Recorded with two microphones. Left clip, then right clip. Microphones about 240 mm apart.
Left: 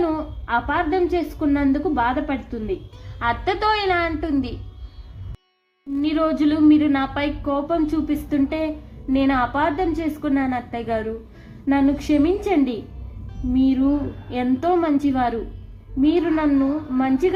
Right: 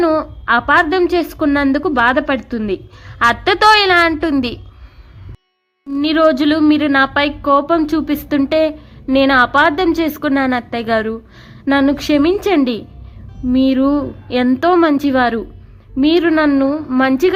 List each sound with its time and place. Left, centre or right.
0.0 s a woman's voice: right
5.9 s a woman's voice: right